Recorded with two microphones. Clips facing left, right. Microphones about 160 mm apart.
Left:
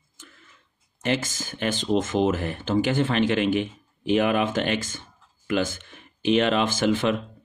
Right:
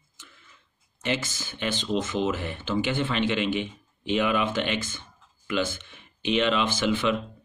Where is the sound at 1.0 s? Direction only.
45° left (ahead or behind).